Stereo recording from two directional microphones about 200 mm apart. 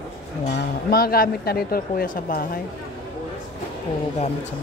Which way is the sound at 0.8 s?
50° left (ahead or behind).